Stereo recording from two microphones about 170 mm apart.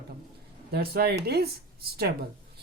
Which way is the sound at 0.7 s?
70° right (ahead or behind).